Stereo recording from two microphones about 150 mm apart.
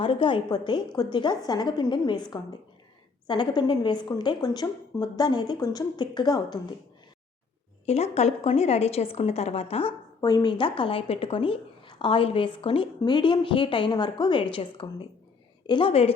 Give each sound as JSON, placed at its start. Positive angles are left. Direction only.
{"t": 0.0, "sound": "a woman's voice", "side_deg": 35}
{"t": 7.9, "sound": "a woman's voice", "side_deg": 45}
{"t": 10.2, "sound": "speech", "side_deg": 25}